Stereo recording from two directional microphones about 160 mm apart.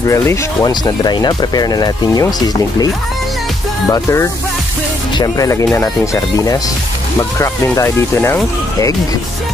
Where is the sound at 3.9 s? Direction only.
15° left (ahead or behind).